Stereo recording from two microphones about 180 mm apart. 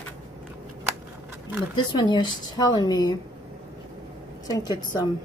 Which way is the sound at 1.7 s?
25° left (ahead or behind).